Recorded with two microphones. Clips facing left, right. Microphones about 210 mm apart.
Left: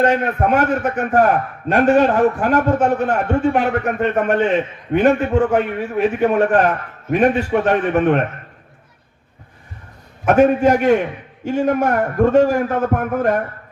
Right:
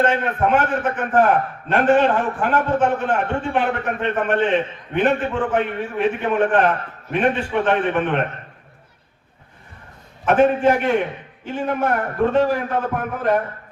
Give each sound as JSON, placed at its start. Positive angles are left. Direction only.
{"t": 0.0, "sound": "a man's voice", "side_deg": 40}
{"t": 10.4, "sound": "a man's voice", "side_deg": 40}